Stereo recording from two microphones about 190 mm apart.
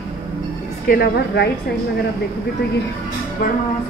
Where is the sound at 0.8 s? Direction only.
55° left (ahead or behind).